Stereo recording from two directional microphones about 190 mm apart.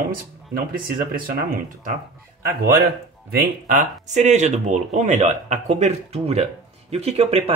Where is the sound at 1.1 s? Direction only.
45° right (ahead or behind).